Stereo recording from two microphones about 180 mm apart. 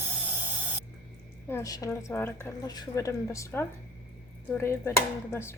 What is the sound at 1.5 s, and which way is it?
Speech, 15° left (ahead or behind).